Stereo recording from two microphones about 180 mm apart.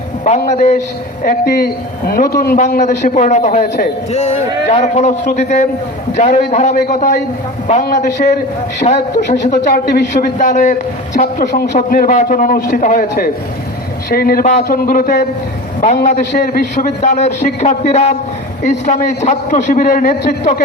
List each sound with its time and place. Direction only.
0.3 s a man's voice: 40° left (ahead or behind)
1.2 s a woman's voice: 55° left (ahead or behind)
2.6 s a man's voice: 45° left (ahead or behind)
4.1 s a man's voice: 35° left (ahead or behind)